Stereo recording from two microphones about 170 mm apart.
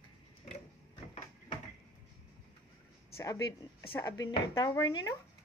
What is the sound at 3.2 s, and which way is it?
A woman's voice, 20° left (ahead or behind).